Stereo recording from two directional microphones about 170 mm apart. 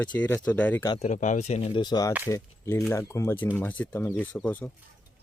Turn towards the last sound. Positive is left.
turn(degrees=10)  # may be behind; listen again after turning